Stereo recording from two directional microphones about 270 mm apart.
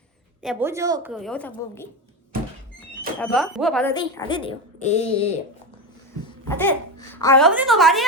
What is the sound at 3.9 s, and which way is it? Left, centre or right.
A woman's voice, centre.